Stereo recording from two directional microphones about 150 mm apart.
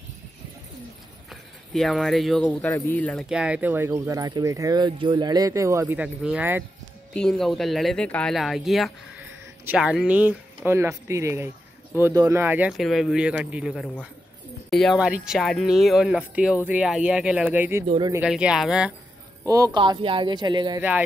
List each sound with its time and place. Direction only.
1.3 s speech: centre (ahead or behind)
3.3 s speech: 5° right (ahead or behind)
5.9 s speech: 10° right (ahead or behind)
7.2 s speech: 5° left (ahead or behind); by 17.8 s 15° right (ahead or behind)
17.8 s speech: 35° right (ahead or behind)
18.2 s speech: 5° right (ahead or behind)
19.4 s speech: 20° right (ahead or behind)
19.8 s speech: 35° right (ahead or behind)